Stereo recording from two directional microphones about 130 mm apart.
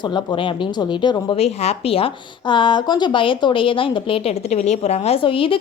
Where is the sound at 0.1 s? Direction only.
35° left (ahead or behind).